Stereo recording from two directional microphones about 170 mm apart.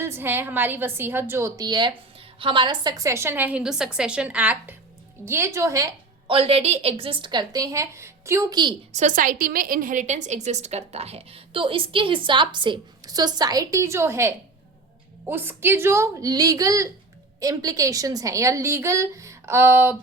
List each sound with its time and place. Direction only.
0.0 s a woman's voice: 15° right (ahead or behind)
6.3 s a woman's voice: 35° right (ahead or behind)
8.9 s a woman's voice: 45° right (ahead or behind); by 20.0 s 15° right (ahead or behind)